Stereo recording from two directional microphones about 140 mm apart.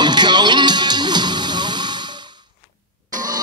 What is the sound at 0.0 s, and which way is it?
Music, 30° right (ahead or behind).